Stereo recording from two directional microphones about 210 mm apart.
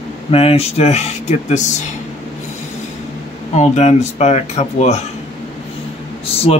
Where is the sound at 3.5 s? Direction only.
30° left (ahead or behind).